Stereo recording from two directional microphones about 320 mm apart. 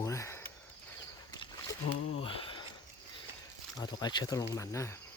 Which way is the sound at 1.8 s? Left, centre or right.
Left.